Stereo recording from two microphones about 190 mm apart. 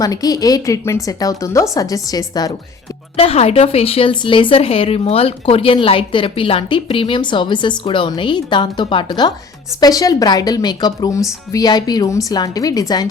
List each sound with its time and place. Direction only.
0.0 s speech: 20° left (ahead or behind)
3.2 s speech: 30° left (ahead or behind)